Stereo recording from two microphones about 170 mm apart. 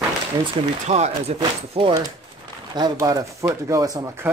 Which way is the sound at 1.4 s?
30° right (ahead or behind).